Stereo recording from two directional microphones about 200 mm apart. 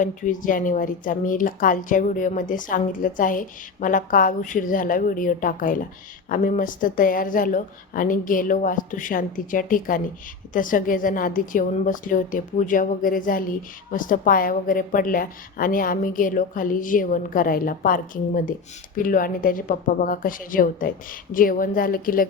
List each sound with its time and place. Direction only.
0.0 s a woman's voice: 40° left (ahead or behind)